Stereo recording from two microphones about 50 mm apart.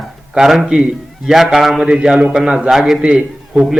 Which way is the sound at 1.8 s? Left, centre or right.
Centre.